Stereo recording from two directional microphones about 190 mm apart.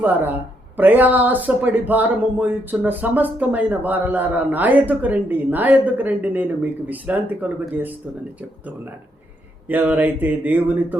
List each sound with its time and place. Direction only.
0.0 s speech: 10° right (ahead or behind)